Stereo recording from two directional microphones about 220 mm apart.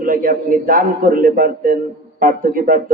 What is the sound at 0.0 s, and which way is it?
Speech, 40° right (ahead or behind).